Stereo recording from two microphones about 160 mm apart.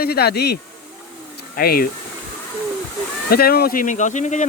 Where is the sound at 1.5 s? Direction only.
65° left (ahead or behind).